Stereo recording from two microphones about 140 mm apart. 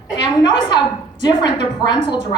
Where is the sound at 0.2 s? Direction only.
30° left (ahead or behind).